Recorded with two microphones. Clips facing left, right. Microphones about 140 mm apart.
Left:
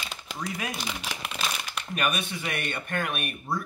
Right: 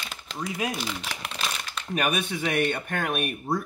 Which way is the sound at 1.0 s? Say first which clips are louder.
Even; 5° left (ahead or behind).